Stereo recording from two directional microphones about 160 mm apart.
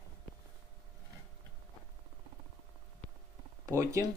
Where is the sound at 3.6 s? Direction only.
20° right (ahead or behind).